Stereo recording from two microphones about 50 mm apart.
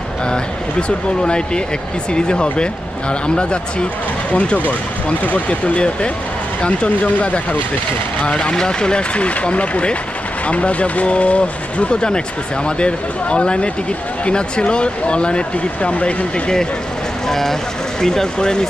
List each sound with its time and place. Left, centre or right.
0.3 s speech: centre
8.3 s speech: centre
17.3 s speech: centre